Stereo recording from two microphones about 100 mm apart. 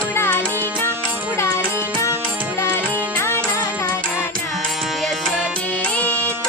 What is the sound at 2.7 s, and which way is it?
Music, 20° left (ahead or behind).